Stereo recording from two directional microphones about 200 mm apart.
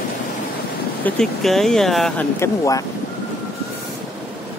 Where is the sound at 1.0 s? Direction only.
Centre (ahead or behind).